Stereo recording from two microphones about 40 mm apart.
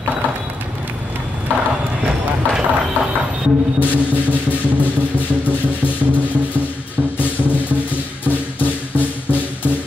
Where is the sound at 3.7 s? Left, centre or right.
Left.